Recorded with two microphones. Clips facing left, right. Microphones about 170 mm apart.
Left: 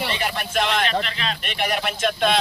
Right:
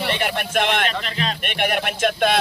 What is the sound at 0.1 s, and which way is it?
Speech, 55° right (ahead or behind).